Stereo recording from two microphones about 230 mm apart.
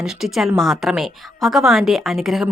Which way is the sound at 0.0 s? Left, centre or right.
Centre.